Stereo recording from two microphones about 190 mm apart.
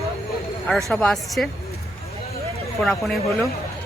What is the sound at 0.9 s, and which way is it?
Speech, 5° left (ahead or behind).